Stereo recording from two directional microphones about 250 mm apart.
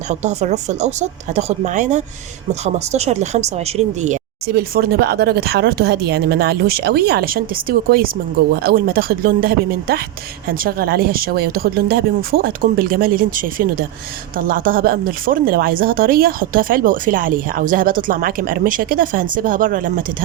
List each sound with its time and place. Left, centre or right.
0.1 s speech: right